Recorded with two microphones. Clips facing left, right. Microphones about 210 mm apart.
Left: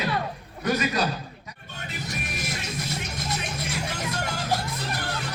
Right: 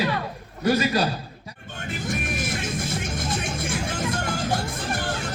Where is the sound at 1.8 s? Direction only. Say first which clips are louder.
Right 6 dB; 50° right (ahead or behind).